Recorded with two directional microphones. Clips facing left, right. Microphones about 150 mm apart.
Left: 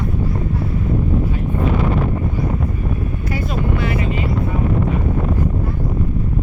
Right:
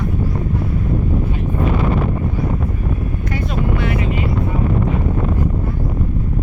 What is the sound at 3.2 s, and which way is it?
Vehicle, 5° left (ahead or behind).